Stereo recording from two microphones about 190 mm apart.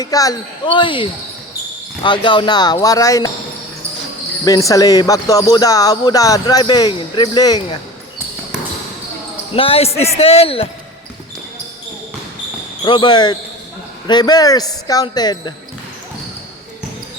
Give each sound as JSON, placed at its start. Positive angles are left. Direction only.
{"t": 0.0, "sound": "speech", "side_deg": 20}
{"t": 4.4, "sound": "speech", "side_deg": 20}
{"t": 9.6, "sound": "a man's voice", "side_deg": 30}
{"t": 12.8, "sound": "speech", "side_deg": 25}